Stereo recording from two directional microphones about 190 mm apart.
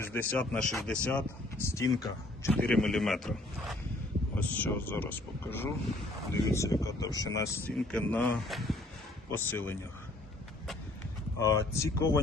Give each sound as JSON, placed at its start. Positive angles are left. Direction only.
{"t": 0.0, "sound": "speech", "side_deg": 10}
{"t": 7.8, "sound": "speech", "side_deg": 5}
{"t": 9.3, "sound": "speech", "side_deg": 10}
{"t": 11.3, "sound": "speech", "side_deg": 15}